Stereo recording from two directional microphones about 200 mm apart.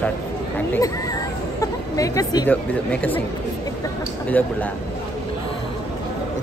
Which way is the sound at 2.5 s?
5° left (ahead or behind).